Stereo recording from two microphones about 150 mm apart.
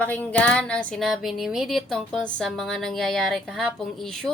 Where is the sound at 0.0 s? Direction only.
10° left (ahead or behind).